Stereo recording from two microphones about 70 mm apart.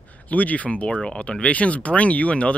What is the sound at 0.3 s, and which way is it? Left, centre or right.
Speech, left.